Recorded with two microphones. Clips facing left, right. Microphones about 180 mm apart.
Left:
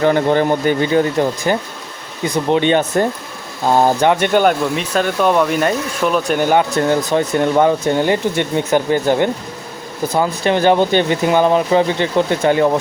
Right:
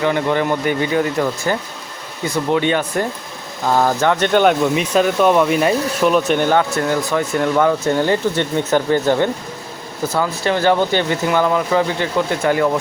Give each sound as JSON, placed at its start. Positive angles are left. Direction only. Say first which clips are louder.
{"t": 0.0, "sound": "speech", "louder": "left 4 dB", "side_deg": 35}
{"t": 4.3, "sound": "speech", "louder": "even", "side_deg": 5}